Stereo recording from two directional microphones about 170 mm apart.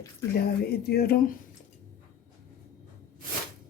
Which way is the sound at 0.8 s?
65° left (ahead or behind).